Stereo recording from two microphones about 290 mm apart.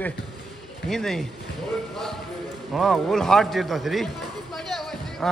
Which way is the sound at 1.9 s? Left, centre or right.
Centre.